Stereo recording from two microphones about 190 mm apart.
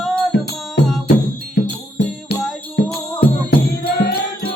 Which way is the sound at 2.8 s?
65° left (ahead or behind).